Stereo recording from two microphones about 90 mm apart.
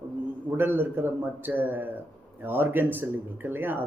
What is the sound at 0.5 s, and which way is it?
Speech, 25° right (ahead or behind).